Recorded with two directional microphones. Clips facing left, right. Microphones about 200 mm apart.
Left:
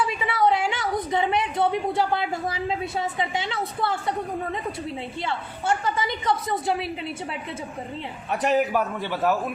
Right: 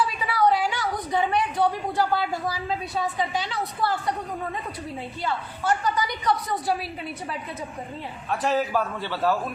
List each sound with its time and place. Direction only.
0.0 s a sound: 20° left (ahead or behind)
3.0 s a woman's voice: 25° left (ahead or behind)
5.2 s a woman's voice: 25° left (ahead or behind)
8.3 s a woman's voice: 20° left (ahead or behind)